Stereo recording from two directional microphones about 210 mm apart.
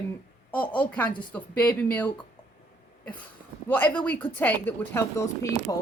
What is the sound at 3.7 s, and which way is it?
Speech, 10° left (ahead or behind).